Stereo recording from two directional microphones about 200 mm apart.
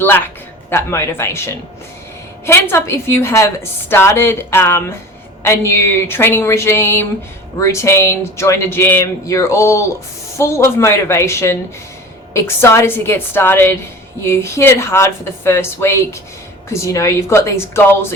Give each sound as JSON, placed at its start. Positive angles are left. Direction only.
{"t": 0.7, "sound": "a woman's voice", "side_deg": 10}
{"t": 2.5, "sound": "a woman's voice", "side_deg": 15}